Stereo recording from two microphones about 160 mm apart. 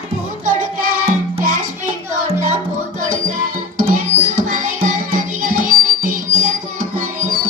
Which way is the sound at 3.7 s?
55° right (ahead or behind).